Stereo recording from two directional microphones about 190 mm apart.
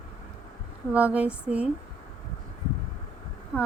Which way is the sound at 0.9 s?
5° right (ahead or behind).